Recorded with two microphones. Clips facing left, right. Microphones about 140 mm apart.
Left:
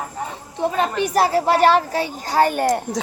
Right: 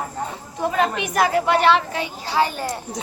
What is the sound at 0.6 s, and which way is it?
A woman's voice, 30° left (ahead or behind).